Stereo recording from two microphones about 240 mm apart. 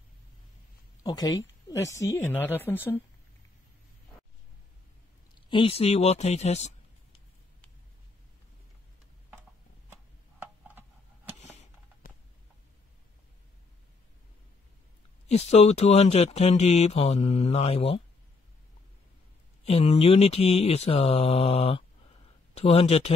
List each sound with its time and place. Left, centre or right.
1.0 s speech: centre
5.3 s speech: left
12.0 s a sound: left
15.2 s speech: left
19.6 s speech: left